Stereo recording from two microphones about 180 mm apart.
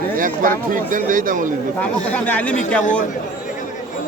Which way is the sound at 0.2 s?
50° right (ahead or behind).